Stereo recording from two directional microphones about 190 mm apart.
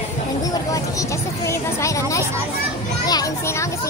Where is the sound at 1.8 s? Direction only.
15° left (ahead or behind).